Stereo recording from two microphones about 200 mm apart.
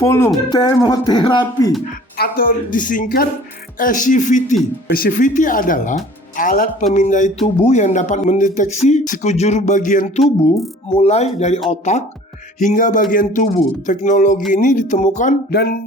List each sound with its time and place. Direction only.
0.0 s speech: 10° left (ahead or behind)
2.1 s speech: 50° left (ahead or behind)
15.5 s speech: 50° left (ahead or behind)